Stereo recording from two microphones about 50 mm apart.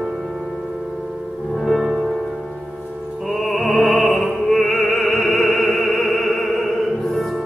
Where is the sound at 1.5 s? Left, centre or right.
Centre.